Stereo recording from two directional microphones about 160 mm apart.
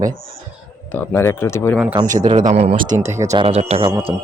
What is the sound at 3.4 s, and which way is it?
Speech, 40° right (ahead or behind).